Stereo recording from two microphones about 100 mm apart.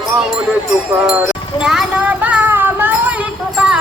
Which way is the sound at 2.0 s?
15° right (ahead or behind).